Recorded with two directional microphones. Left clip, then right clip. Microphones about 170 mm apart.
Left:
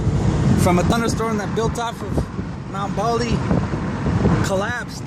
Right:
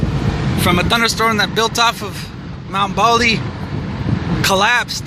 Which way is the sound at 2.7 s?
15° right (ahead or behind).